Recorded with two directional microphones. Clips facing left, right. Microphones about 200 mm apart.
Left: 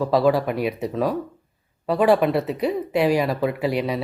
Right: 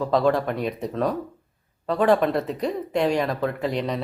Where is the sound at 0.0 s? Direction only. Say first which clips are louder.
Left 2 dB; 5° left (ahead or behind).